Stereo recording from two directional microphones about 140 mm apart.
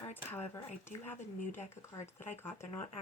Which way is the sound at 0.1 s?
15° left (ahead or behind).